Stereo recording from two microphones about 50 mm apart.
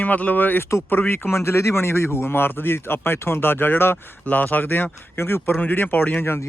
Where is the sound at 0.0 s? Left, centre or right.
Left.